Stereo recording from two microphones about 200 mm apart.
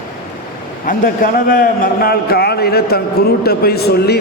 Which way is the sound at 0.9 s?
45° left (ahead or behind).